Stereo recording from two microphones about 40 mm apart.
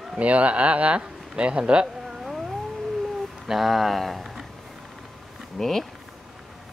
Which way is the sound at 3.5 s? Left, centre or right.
Centre.